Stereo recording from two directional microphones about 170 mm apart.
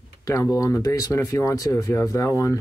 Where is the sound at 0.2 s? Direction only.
20° left (ahead or behind).